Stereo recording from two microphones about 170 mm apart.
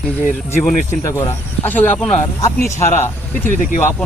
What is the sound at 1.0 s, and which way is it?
Speech, 15° left (ahead or behind).